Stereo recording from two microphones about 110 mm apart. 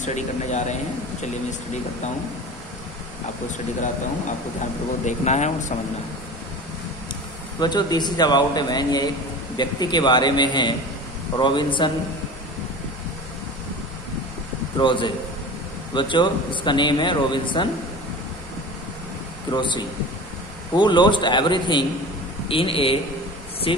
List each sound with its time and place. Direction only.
0.0 s speech: 90° left
5.0 s speech: 90° left
7.6 s a man's voice: 40° left (ahead or behind)
14.8 s a man's voice: 45° left (ahead or behind)
19.5 s a man's voice: 45° left (ahead or behind)